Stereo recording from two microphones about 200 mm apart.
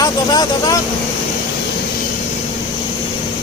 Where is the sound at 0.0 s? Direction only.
20° left (ahead or behind).